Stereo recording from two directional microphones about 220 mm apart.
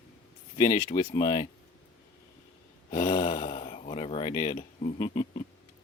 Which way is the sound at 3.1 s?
25° left (ahead or behind).